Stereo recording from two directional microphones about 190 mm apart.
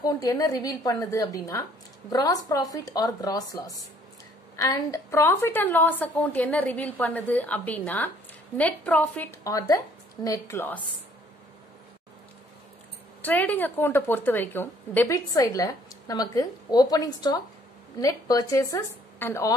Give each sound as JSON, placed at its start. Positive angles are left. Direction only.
{"t": 0.0, "sound": "a woman's voice", "side_deg": 15}
{"t": 13.2, "sound": "a woman's voice", "side_deg": 10}